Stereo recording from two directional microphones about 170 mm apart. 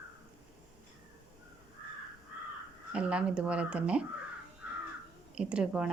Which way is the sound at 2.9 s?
5° right (ahead or behind).